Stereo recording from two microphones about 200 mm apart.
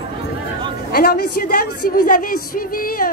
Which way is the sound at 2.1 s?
45° left (ahead or behind).